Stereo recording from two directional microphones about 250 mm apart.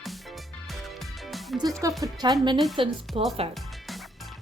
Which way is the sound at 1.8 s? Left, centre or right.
Centre.